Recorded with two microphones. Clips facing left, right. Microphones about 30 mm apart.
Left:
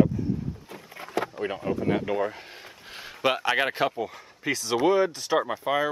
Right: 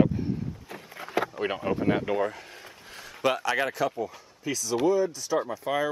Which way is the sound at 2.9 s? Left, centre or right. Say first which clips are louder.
Left 1 dB; left.